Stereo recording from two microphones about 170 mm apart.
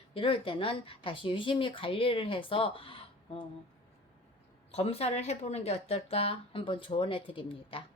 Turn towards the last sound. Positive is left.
turn(degrees=30)  # may be behind; listen again after turning